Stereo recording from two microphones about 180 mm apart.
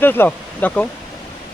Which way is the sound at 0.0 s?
10° left (ahead or behind).